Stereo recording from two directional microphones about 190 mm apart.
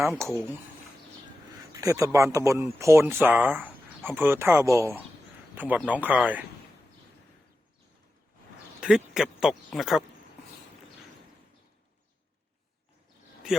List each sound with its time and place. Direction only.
0.2 s speech: 15° right (ahead or behind)
1.8 s speech: 15° right (ahead or behind)
8.8 s speech: 5° right (ahead or behind)